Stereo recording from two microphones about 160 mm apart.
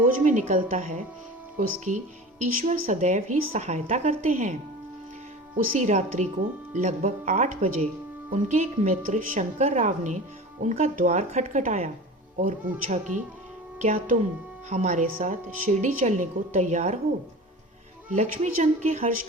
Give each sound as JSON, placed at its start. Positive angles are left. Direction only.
{"t": 0.3, "sound": "a woman's voice", "side_deg": -50}
{"t": 5.7, "sound": "a woman's voice", "side_deg": -45}
{"t": 18.1, "sound": "a woman's voice", "side_deg": -45}